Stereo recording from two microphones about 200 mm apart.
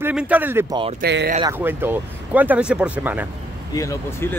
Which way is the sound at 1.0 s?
55° right (ahead or behind).